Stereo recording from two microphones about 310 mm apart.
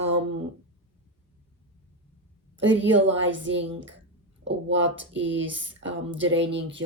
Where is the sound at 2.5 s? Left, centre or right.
Right.